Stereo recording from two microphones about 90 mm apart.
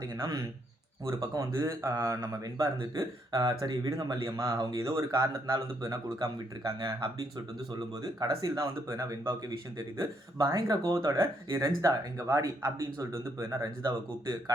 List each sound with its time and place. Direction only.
0.0 s speech: 45° right (ahead or behind)